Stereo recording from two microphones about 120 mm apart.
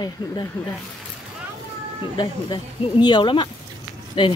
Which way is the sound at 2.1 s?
40° left (ahead or behind).